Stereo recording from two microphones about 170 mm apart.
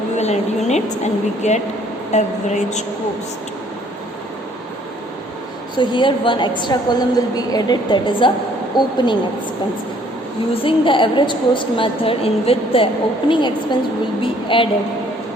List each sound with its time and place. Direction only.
0.2 s a woman's voice: 40° left (ahead or behind)
5.7 s a woman's voice: 25° left (ahead or behind)
10.5 s a woman's voice: 30° left (ahead or behind)